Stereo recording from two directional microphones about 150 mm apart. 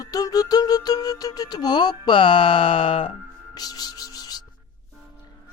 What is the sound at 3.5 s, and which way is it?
Music, 25° left (ahead or behind).